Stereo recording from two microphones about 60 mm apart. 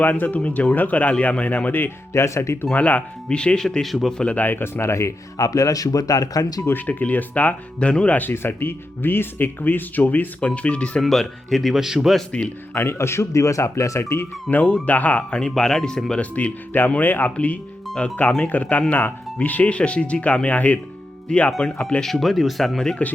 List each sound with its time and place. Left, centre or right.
0.2 s speech: left
2.1 s speech: left
2.7 s speech: left
3.2 s speech: centre
4.2 s speech: left
4.4 s speech: left
5.4 s speech: left
6.7 s speech: left
11.0 s a man's voice: centre
12.7 s speech: left
14.5 s speech: left
15.4 s speech: centre
16.2 s speech: left
22.0 s a man's voice: centre